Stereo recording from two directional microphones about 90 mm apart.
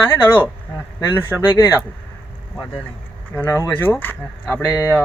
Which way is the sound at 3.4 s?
30° left (ahead or behind).